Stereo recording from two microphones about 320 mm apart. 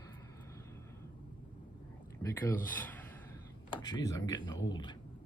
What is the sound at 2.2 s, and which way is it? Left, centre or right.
Speech, centre.